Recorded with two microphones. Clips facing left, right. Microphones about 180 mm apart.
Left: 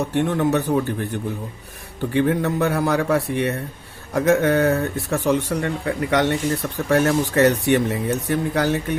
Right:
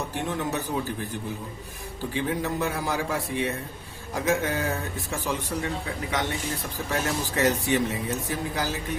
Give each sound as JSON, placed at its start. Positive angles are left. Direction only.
{"t": 0.1, "sound": "speech", "side_deg": 65}
{"t": 2.0, "sound": "speech", "side_deg": 65}